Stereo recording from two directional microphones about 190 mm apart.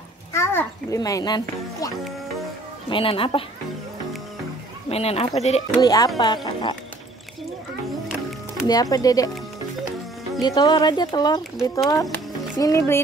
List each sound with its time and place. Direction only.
0.3 s a sound: 15° left (ahead or behind)
2.9 s speech: 30° left (ahead or behind)
4.8 s speech: 35° left (ahead or behind)
5.8 s speech: 20° left (ahead or behind)
8.6 s speech: 20° left (ahead or behind)
10.4 s speech: 20° left (ahead or behind)